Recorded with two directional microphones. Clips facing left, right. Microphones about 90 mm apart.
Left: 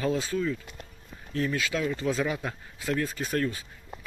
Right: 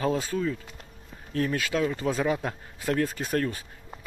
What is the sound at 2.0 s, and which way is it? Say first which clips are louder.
Speech: right 2 dB; 40° right (ahead or behind).